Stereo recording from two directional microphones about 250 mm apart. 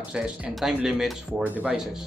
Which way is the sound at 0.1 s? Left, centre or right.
Centre.